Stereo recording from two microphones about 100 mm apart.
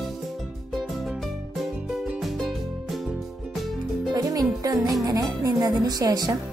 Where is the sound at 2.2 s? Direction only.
Centre (ahead or behind).